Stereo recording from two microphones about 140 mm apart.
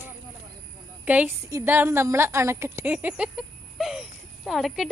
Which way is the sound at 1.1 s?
15° right (ahead or behind).